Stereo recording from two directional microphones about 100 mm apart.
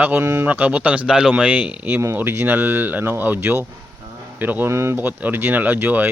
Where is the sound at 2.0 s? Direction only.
25° right (ahead or behind).